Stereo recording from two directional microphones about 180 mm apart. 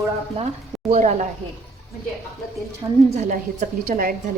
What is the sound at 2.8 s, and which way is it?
Speech, 20° right (ahead or behind).